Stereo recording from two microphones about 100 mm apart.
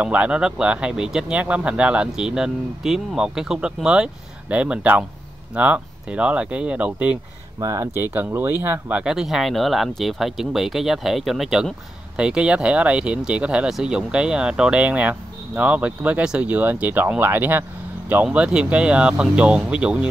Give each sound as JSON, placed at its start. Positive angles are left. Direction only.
{"t": 0.0, "sound": "speech", "side_deg": -15}
{"t": 7.6, "sound": "speech", "side_deg": -35}
{"t": 7.9, "sound": "speech", "side_deg": -20}